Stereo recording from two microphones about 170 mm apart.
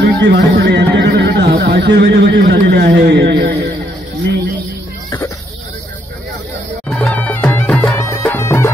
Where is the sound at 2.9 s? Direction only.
85° right.